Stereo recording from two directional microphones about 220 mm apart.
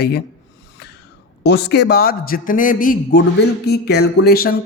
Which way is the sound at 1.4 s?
50° left (ahead or behind).